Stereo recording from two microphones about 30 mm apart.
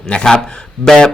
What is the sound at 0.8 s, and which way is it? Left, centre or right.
Speech, centre.